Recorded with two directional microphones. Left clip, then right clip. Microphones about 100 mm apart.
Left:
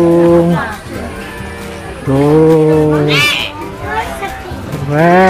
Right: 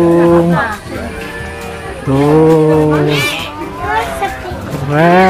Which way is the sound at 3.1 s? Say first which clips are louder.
Left 3 dB; 20° left (ahead or behind).